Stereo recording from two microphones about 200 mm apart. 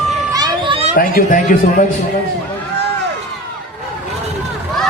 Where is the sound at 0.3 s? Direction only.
20° right (ahead or behind).